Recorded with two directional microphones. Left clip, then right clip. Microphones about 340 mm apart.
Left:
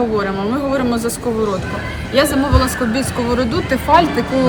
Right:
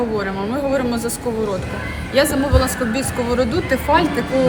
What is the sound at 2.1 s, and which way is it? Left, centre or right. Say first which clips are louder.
A woman's voice: left 2 dB; centre.